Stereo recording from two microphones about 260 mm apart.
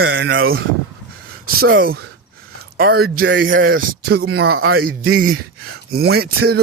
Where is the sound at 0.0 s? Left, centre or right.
Right.